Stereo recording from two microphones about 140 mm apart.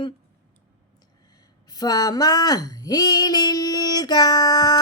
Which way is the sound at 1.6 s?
30° left (ahead or behind).